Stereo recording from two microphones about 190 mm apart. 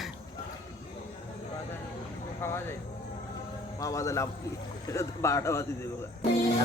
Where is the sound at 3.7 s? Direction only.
15° left (ahead or behind).